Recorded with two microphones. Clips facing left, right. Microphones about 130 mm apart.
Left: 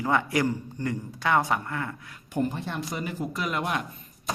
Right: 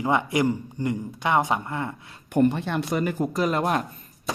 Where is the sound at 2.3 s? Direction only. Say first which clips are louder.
Right 7 dB; 70° right (ahead or behind).